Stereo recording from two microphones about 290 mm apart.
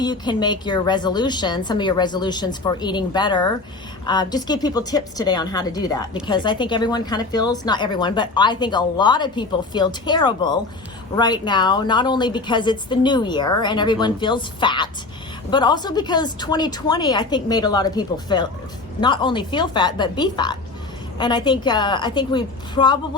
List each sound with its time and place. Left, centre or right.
0.0 s speech: centre